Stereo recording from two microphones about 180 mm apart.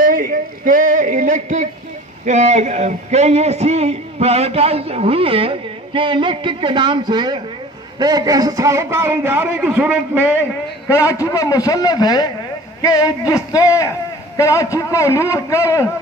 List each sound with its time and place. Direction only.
0.0 s a sound: 50° right (ahead or behind); by 7.4 s 25° right (ahead or behind)
8.0 s a man's voice: 20° right (ahead or behind)
10.9 s a man's voice: 15° left (ahead or behind)